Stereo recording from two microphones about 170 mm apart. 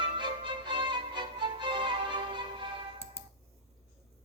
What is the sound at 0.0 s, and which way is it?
Music, 30° right (ahead or behind).